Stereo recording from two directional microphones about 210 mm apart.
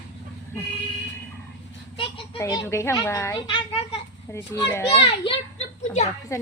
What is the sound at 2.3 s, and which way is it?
A child's voice, 15° left (ahead or behind).